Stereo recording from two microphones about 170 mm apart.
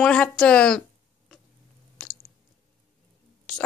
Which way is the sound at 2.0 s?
5° left (ahead or behind).